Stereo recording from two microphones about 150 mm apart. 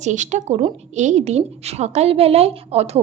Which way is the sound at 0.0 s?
50° right (ahead or behind).